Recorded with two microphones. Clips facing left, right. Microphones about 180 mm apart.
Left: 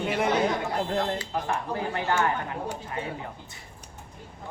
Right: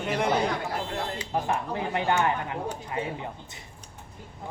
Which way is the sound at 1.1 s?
20° right (ahead or behind).